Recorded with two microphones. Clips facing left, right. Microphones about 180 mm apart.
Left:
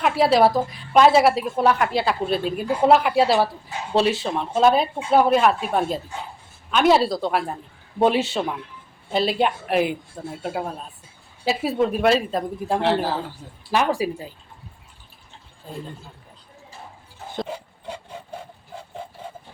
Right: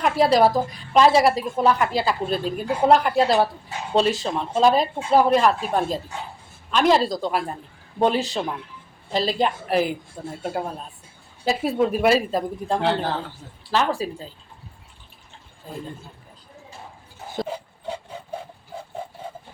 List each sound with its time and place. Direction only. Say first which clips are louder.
0.0 s a woman's voice: even; 5° left (ahead or behind)